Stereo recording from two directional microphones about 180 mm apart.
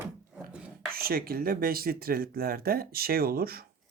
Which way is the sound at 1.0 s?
55° right (ahead or behind).